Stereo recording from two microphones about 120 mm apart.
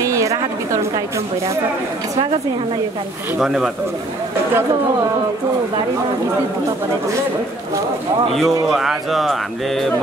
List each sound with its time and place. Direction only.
0.0 s a sound: 25° right (ahead or behind)
3.3 s speech: 5° right (ahead or behind)
8.3 s speech: centre (ahead or behind)